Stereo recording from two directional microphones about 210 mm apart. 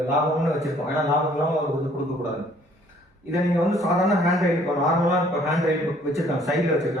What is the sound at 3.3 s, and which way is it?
A man's voice, centre (ahead or behind).